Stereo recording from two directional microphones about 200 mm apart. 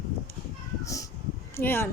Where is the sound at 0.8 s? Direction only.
15° left (ahead or behind).